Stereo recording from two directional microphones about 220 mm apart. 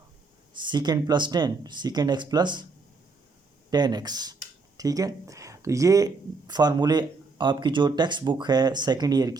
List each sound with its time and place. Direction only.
0.6 s speech: 20° right (ahead or behind)
3.7 s speech: 20° right (ahead or behind)